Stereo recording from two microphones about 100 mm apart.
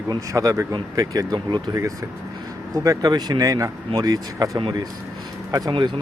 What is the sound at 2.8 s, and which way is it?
Speech, 40° right (ahead or behind).